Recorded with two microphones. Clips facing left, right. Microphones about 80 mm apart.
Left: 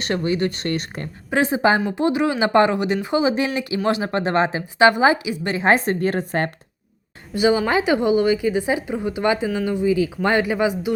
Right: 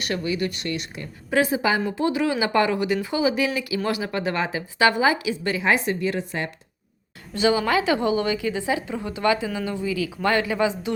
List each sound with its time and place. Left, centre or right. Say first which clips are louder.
0.0 s speech: left 4 dB; left
1.3 s speech: left 3 dB; left
5.6 s a woman's voice: left 5 dB; left
7.3 s speech: left 3 dB; centre